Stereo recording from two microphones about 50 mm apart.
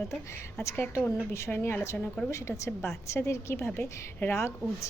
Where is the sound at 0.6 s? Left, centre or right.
Left.